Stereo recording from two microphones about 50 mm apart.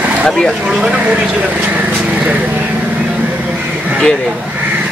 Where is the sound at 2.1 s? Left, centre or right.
Right.